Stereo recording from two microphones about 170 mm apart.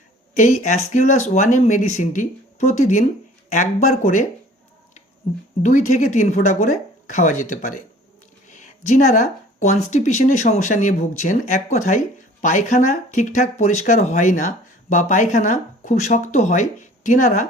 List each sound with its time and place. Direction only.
0.3 s speech: 45° left (ahead or behind)
5.6 s speech: 45° left (ahead or behind)